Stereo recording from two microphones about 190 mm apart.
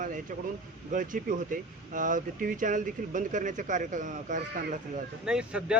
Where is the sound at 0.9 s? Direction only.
45° right (ahead or behind).